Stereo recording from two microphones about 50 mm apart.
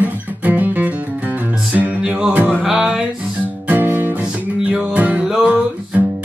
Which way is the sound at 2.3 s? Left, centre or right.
Right.